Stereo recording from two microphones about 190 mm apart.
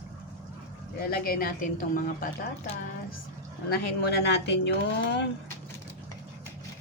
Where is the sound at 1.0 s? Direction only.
50° left (ahead or behind).